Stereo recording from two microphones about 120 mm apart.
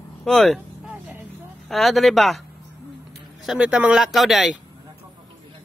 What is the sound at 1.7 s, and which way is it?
Speech, centre (ahead or behind).